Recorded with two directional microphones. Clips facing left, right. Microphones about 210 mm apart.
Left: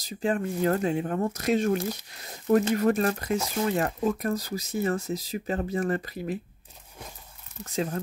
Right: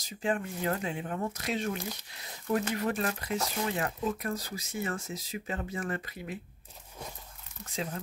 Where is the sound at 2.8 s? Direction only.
45° left (ahead or behind).